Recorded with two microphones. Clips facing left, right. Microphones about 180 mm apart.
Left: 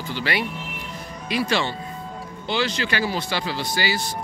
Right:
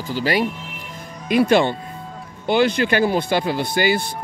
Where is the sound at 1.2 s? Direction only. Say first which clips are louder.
Right 8 dB; 50° right (ahead or behind).